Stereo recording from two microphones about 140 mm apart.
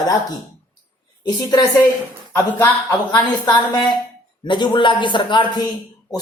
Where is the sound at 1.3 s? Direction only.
30° left (ahead or behind).